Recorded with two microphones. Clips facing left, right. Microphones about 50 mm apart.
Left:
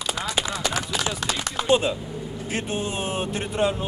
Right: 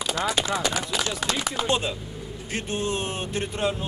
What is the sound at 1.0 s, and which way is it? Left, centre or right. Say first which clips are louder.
Speech: even; centre.